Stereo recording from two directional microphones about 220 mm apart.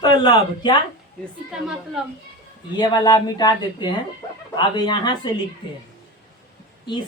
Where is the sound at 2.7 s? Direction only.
20° left (ahead or behind).